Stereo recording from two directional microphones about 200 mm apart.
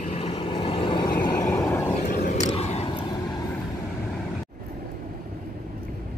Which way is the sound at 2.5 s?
30° left (ahead or behind).